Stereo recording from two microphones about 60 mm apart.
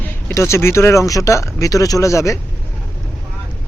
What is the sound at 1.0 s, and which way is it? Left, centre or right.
Speech, left.